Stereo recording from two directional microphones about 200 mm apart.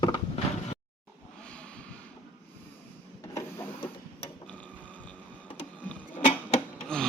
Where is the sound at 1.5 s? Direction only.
5° left (ahead or behind).